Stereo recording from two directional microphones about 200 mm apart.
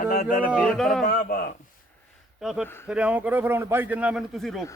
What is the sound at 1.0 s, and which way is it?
Speech, 40° left (ahead or behind).